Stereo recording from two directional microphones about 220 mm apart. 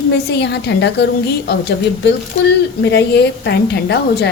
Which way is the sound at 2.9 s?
50° left (ahead or behind).